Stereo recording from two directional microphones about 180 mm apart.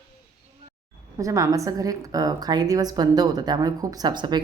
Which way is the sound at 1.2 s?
20° right (ahead or behind).